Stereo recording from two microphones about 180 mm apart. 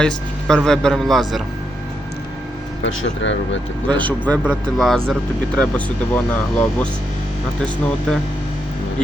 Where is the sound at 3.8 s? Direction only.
10° left (ahead or behind).